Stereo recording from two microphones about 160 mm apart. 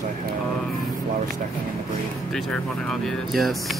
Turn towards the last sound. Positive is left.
turn(degrees=0)  # may be behind; listen again after turning